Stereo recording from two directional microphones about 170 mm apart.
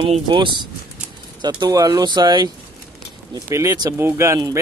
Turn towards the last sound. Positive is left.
turn(degrees=-20)  # may be behind; listen again after turning